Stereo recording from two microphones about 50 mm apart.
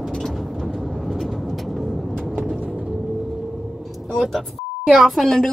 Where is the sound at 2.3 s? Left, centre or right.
Right.